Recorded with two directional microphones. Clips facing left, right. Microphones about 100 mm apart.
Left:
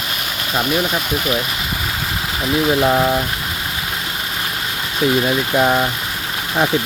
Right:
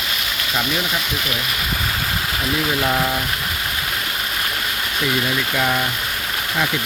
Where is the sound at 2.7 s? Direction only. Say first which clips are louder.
Left 7 dB; 20° left (ahead or behind).